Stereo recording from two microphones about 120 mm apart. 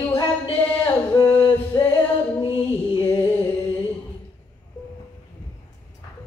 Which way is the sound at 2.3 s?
40° left (ahead or behind).